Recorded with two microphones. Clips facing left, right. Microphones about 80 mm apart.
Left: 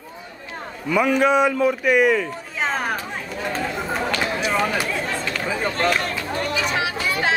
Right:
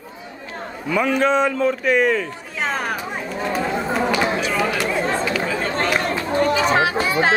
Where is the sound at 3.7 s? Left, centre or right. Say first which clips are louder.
Right 4 dB; centre.